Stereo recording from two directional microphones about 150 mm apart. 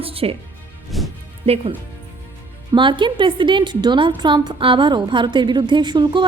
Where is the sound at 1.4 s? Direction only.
40° right (ahead or behind).